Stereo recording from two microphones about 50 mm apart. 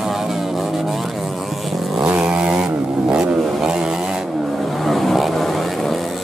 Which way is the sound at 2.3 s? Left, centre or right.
Centre.